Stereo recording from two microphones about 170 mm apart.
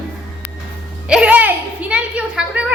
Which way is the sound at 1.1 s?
5° right (ahead or behind).